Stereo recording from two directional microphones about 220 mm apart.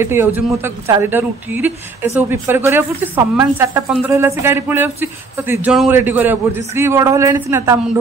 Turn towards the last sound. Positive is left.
turn(degrees=-10)  # may be behind; listen again after turning